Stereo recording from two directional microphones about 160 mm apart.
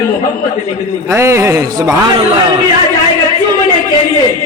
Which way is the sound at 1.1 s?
15° right (ahead or behind).